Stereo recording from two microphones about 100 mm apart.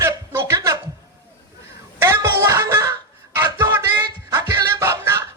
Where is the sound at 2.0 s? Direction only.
25° right (ahead or behind).